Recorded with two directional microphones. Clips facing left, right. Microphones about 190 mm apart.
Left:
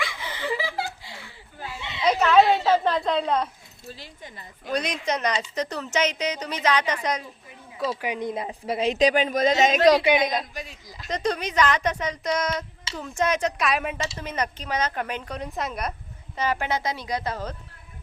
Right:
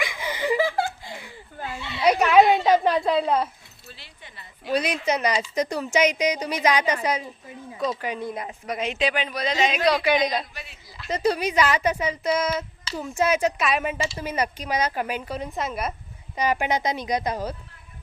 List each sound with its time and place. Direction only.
0.0 s chuckle: 15° right (ahead or behind)
0.5 s chuckle: 50° right (ahead or behind)
2.0 s a woman's voice: 10° right (ahead or behind)
3.9 s speech: 45° left (ahead or behind)
4.6 s a woman's voice: 5° right (ahead or behind)
7.8 s a woman's voice: 10° left (ahead or behind); by 10.0 s 45° left (ahead or behind)
10.5 s a sound: 40° left (ahead or behind)
11.1 s a woman's voice: 5° right (ahead or behind)
16.3 s a woman's voice: 15° right (ahead or behind)